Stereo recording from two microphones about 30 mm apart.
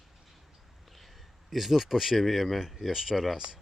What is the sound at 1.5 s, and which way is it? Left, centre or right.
Speech, centre.